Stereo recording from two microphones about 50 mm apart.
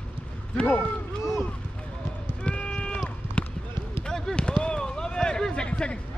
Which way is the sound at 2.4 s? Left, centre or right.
Centre.